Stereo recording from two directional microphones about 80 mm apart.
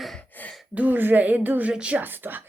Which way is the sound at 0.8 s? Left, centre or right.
Right.